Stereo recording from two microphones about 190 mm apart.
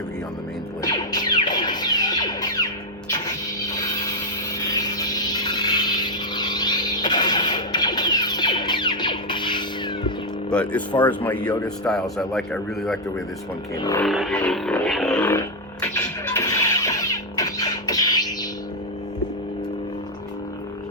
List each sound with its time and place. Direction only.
0.8 s music: 20° left (ahead or behind)
4.7 s vehicle: 20° left (ahead or behind)
10.5 s speech: 5° left (ahead or behind)
13.7 s speech: 20° left (ahead or behind)
14.0 s a sound: centre (ahead or behind); by 18.3 s 20° left (ahead or behind)